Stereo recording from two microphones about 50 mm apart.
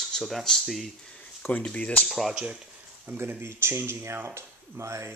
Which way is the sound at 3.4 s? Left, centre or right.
Right.